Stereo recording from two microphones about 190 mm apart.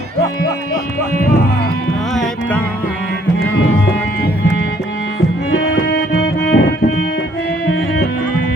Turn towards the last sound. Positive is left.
turn(degrees=60)  # may be behind; listen again after turning